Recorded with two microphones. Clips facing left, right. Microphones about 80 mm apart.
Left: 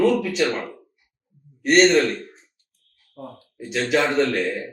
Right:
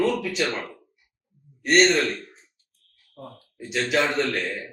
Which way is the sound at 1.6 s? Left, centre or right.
Centre.